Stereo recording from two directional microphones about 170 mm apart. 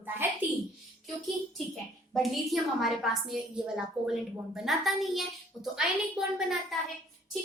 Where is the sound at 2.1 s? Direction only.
Centre (ahead or behind).